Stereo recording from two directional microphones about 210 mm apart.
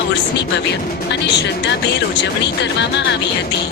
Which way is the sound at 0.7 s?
55° left (ahead or behind).